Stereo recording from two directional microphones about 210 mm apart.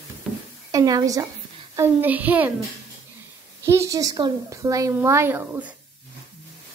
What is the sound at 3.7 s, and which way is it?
A woman's voice, 15° right (ahead or behind).